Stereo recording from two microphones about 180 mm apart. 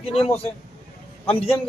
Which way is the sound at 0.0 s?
35° left (ahead or behind).